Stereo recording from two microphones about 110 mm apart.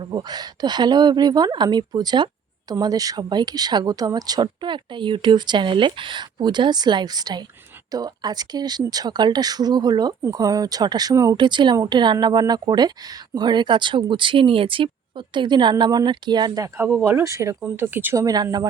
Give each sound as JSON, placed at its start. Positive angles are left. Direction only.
{"t": 0.1, "sound": "a woman's voice", "side_deg": -40}
{"t": 11.3, "sound": "a woman's voice", "side_deg": -45}
{"t": 17.0, "sound": "speech", "side_deg": -25}
{"t": 18.2, "sound": "a woman's voice", "side_deg": -35}